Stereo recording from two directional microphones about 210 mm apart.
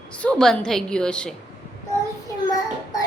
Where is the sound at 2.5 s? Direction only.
15° left (ahead or behind).